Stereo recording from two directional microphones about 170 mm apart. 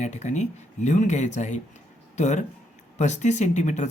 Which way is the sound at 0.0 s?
45° left (ahead or behind).